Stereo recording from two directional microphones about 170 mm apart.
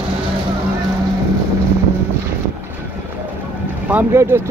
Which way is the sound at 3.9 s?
15° right (ahead or behind).